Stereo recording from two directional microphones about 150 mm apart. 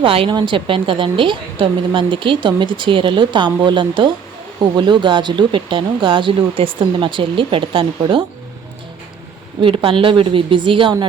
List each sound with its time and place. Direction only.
0.0 s a woman's voice: 35° right (ahead or behind)
9.6 s a woman's voice: 35° right (ahead or behind)